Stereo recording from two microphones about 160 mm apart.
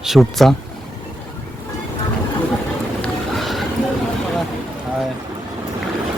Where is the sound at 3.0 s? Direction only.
Centre (ahead or behind).